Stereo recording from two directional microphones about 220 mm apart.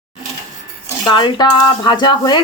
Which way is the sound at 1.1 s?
20° left (ahead or behind).